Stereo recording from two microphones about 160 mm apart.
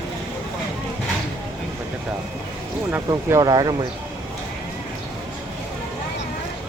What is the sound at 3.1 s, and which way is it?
Speech, 20° right (ahead or behind).